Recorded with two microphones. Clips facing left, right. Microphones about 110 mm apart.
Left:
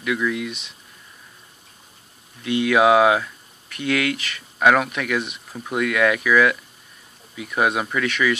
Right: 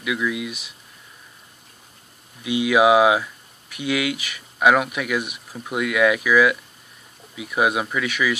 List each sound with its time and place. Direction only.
0.0 s speech: 5° right (ahead or behind)
2.4 s speech: 10° right (ahead or behind)